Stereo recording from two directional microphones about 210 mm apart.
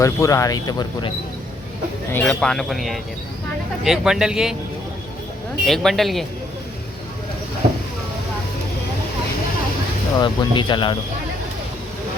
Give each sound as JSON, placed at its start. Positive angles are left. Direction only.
{"t": 0.0, "sound": "speech", "side_deg": 15}
{"t": 2.1, "sound": "speech", "side_deg": 5}
{"t": 5.6, "sound": "speech", "side_deg": 0}
{"t": 10.2, "sound": "speech", "side_deg": 20}